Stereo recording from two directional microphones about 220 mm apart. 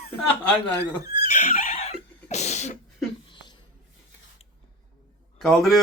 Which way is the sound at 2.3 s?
30° left (ahead or behind).